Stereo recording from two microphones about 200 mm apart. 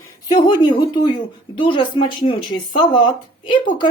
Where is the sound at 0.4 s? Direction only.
25° left (ahead or behind).